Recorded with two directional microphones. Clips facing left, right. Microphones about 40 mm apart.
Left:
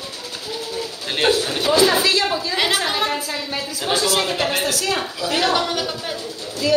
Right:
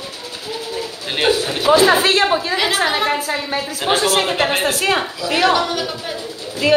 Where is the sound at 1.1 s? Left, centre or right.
Centre.